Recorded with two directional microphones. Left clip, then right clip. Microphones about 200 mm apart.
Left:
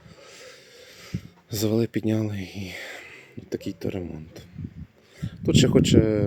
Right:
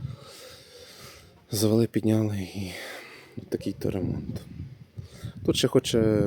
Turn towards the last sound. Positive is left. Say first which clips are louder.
# left 3 dB
turn(degrees=-5)  # may be behind; listen again after turning